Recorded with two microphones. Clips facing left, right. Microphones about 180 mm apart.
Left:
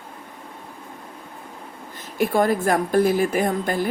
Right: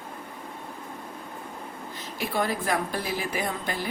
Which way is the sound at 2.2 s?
50° left (ahead or behind).